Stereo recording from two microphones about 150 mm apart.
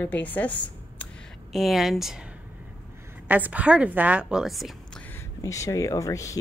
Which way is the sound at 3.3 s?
10° right (ahead or behind).